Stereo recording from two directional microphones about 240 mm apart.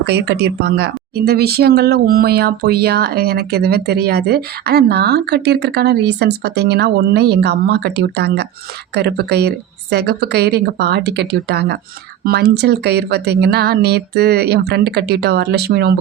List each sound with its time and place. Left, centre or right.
0.0 s speech: right